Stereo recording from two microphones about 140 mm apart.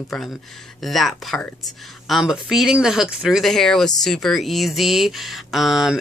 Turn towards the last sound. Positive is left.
turn(degrees=0)  # may be behind; listen again after turning